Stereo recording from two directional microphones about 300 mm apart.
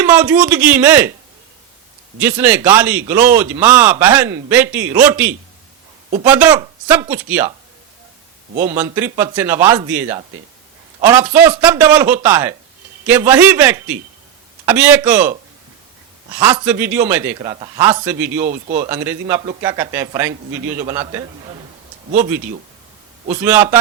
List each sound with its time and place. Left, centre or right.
0.0 s a man's voice: centre
2.1 s a man's voice: centre
8.6 s a man's voice: centre
16.6 s speech: centre
23.3 s speech: centre